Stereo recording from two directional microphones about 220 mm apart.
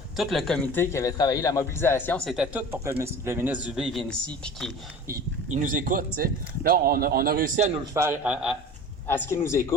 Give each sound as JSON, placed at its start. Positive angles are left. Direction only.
{"t": 0.2, "sound": "a man's voice", "side_deg": 0}
{"t": 5.0, "sound": "speech", "side_deg": -40}
{"t": 7.9, "sound": "speech", "side_deg": -10}
{"t": 9.0, "sound": "a man's voice", "side_deg": 10}